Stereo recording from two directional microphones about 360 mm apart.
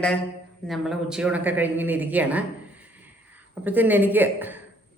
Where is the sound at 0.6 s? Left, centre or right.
Centre.